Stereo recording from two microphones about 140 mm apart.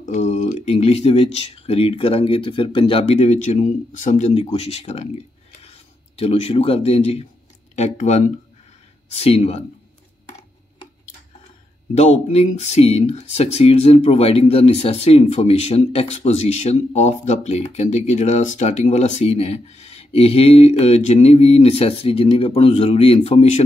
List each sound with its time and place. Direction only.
0.0 s a sound: 60° left (ahead or behind)
0.7 s speech: 50° left (ahead or behind)
11.9 s speech: 50° left (ahead or behind)